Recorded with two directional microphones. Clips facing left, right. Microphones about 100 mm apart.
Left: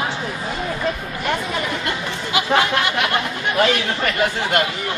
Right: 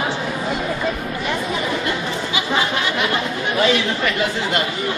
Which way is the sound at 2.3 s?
60° left (ahead or behind).